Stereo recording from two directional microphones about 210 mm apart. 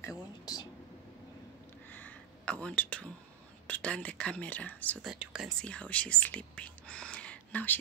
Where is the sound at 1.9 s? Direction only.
5° left (ahead or behind).